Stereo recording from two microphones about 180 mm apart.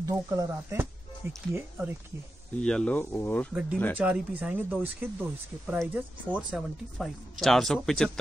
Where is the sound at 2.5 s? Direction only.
5° left (ahead or behind).